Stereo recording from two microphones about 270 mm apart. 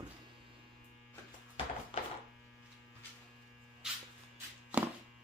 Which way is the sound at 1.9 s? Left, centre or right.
Centre.